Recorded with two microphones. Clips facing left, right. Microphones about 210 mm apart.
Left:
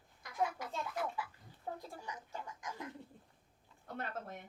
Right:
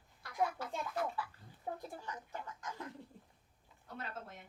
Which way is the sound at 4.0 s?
55° left (ahead or behind).